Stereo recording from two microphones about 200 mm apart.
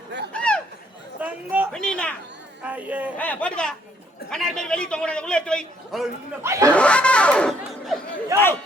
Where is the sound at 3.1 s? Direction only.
5° left (ahead or behind).